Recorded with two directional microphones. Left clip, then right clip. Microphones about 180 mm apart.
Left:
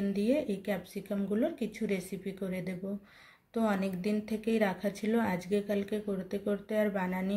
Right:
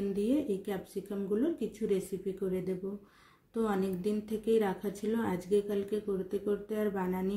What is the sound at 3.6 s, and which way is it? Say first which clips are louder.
A woman's voice: even; 15° left (ahead or behind).